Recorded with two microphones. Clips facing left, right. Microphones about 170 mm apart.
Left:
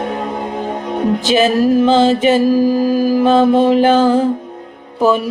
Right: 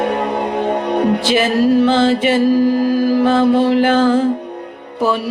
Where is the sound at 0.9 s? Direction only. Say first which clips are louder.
Even; 70° right (ahead or behind).